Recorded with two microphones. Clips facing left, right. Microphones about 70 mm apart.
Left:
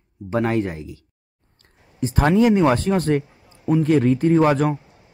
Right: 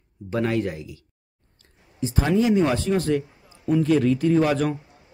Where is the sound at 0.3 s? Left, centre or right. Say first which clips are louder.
Left 3 dB; left.